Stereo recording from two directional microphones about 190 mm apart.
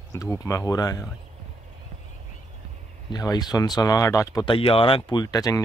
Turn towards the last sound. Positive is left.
turn(degrees=20)  # may be behind; listen again after turning